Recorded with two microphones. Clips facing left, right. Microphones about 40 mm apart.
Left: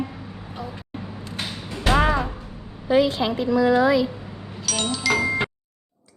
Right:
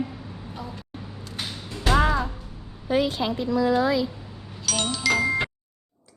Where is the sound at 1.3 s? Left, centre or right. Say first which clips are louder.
Left 2 dB; left.